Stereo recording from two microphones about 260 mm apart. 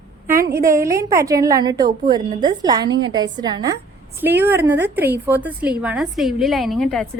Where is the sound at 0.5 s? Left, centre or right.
Centre.